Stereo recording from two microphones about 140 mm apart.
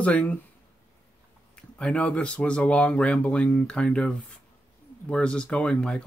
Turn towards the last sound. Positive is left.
turn(degrees=5)  # may be behind; listen again after turning